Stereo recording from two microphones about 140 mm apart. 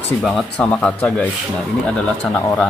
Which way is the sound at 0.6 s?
10° left (ahead or behind).